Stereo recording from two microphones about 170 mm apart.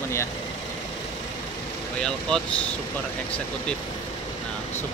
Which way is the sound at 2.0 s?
5° left (ahead or behind).